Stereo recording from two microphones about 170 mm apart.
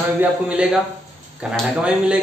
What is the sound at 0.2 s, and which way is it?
Speech, 5° right (ahead or behind).